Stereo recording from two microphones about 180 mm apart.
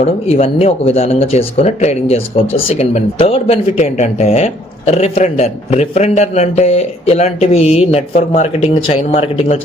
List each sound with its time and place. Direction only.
0.0 s speech: 35° left (ahead or behind)